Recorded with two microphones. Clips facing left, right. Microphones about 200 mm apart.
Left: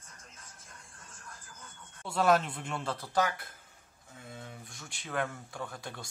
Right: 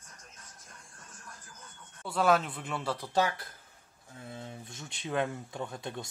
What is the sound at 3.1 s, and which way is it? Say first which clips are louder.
Speech: right 1 dB; 25° right (ahead or behind).